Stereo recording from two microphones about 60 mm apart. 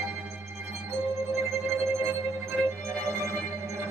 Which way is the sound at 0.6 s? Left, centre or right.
Right.